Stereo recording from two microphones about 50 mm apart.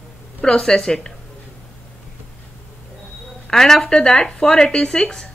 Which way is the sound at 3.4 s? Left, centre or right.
Centre.